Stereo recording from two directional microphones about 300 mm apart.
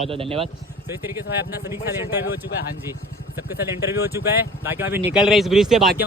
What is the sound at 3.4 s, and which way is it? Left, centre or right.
Speech, centre.